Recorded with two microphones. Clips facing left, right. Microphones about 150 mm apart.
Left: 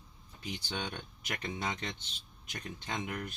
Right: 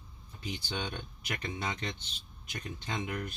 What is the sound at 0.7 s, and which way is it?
Speech, 15° right (ahead or behind).